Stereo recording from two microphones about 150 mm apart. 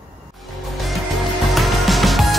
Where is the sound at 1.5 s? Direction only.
Centre (ahead or behind).